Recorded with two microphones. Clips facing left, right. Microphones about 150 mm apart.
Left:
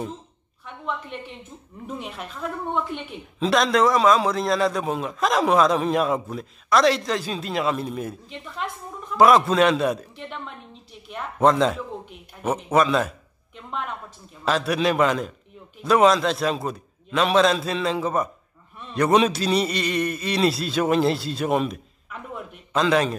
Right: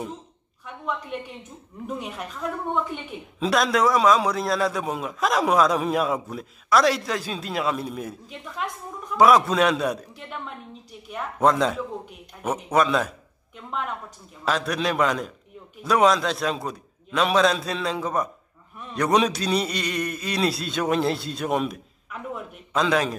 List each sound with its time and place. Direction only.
1.9 s speech: centre (ahead or behind)
14.4 s a man's voice: 5° left (ahead or behind)